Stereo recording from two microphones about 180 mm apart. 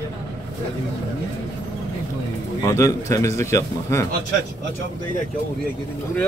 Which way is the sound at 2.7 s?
15° left (ahead or behind).